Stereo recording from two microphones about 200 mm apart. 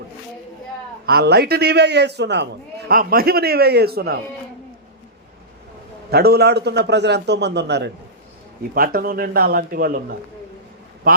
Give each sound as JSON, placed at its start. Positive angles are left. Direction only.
{"t": 1.0, "sound": "a man's voice", "side_deg": -55}
{"t": 2.9, "sound": "a man's voice", "side_deg": -45}
{"t": 6.1, "sound": "a man's voice", "side_deg": -50}
{"t": 8.7, "sound": "a man's voice", "side_deg": -45}